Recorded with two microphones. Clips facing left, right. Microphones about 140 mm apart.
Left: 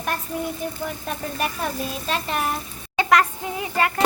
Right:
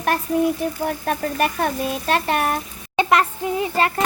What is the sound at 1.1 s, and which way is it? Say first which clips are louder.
A child's voice: right 6 dB; 65° right (ahead or behind).